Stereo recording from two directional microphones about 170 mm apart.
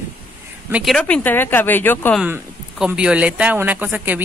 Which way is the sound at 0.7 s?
10° right (ahead or behind).